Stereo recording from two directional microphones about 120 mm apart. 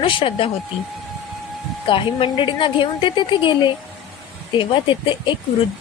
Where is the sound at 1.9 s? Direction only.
45° left (ahead or behind).